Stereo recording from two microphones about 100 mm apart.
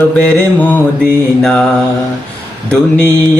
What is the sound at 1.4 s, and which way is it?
Mantra, 10° left (ahead or behind).